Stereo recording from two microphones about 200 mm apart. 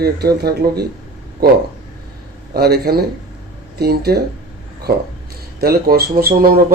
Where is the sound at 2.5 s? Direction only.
55° right (ahead or behind).